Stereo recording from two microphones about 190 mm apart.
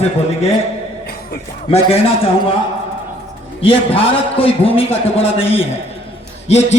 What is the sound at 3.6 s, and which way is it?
A man's voice, 30° left (ahead or behind).